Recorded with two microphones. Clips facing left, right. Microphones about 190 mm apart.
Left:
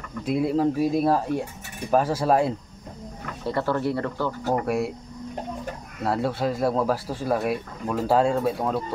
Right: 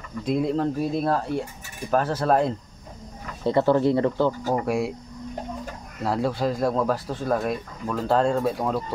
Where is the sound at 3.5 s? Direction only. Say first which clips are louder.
Right 5 dB; 20° right (ahead or behind).